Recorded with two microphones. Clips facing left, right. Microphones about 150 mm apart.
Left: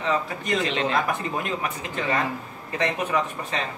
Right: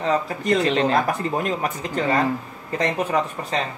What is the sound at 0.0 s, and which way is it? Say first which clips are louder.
Speech: right 4 dB; 40° right (ahead or behind).